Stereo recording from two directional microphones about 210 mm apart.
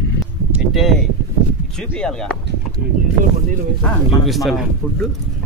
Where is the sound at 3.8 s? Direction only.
Centre (ahead or behind).